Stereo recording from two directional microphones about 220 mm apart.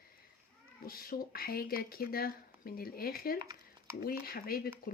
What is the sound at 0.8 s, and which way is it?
Speech, 40° left (ahead or behind).